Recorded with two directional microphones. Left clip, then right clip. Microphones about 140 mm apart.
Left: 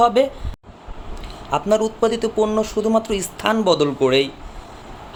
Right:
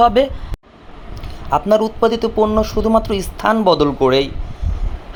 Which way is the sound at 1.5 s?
25° right (ahead or behind).